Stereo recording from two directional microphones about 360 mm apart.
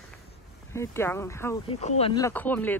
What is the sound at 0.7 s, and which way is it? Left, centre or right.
Speech, centre.